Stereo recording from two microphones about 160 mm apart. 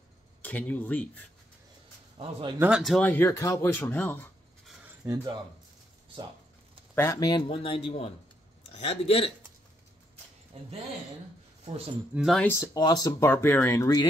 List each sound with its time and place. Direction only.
0.4 s speech: 10° left (ahead or behind)
2.1 s a man's voice: 35° right (ahead or behind)
2.6 s speech: 5° right (ahead or behind)
3.1 s speech: 15° left (ahead or behind)
4.8 s cutlery: 20° right (ahead or behind)
7.0 s speech: 25° left (ahead or behind)
11.6 s speech: 40° right (ahead or behind)
12.1 s speech: 5° right (ahead or behind)
12.4 s speech: 15° left (ahead or behind)
12.7 s speech: 25° left (ahead or behind)